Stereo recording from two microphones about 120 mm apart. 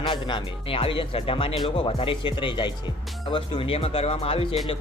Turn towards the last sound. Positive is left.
turn(degrees=55)  # may be behind; listen again after turning